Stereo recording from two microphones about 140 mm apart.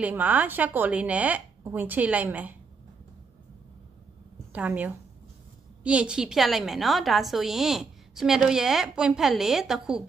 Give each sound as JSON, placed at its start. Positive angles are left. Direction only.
{"t": 0.0, "sound": "speech", "side_deg": -10}
{"t": 4.5, "sound": "a woman's voice", "side_deg": -10}